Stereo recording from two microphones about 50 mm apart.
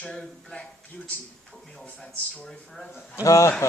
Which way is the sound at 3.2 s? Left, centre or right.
Left.